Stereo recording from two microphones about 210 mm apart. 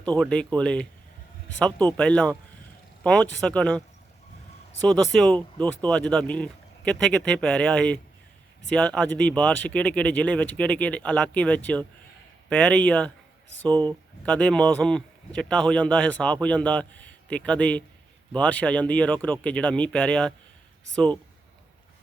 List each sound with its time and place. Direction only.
0.2 s speech: 5° left (ahead or behind)
5.1 s speech: 5° left (ahead or behind)
13.7 s speech: 20° right (ahead or behind)
14.3 s speech: 5° left (ahead or behind)